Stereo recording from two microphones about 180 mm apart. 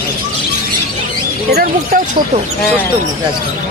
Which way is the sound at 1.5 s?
50° right (ahead or behind).